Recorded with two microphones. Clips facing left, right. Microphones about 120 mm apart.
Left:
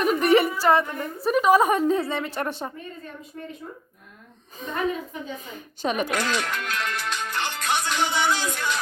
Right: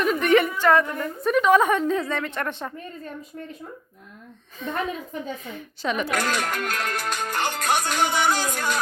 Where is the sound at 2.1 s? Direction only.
5° left (ahead or behind).